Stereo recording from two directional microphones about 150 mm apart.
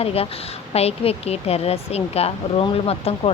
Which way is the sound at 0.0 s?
40° left (ahead or behind).